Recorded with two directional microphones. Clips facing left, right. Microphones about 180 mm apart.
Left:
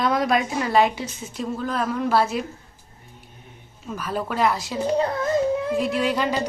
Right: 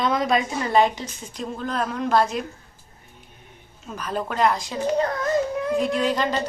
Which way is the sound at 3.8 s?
5° left (ahead or behind).